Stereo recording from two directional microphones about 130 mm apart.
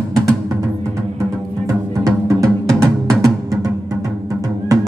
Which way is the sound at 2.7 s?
5° left (ahead or behind).